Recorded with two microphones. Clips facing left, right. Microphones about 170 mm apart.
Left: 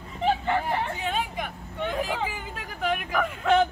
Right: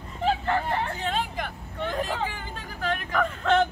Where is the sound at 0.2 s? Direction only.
5° left (ahead or behind).